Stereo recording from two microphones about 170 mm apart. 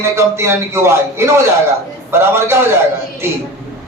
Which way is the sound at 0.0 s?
15° right (ahead or behind).